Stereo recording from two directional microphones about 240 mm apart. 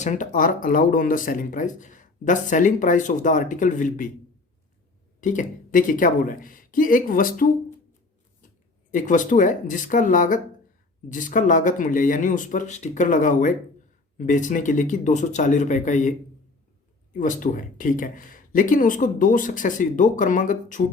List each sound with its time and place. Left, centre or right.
0.0 s speech: left
5.2 s speech: left
8.9 s speech: left
17.2 s speech: left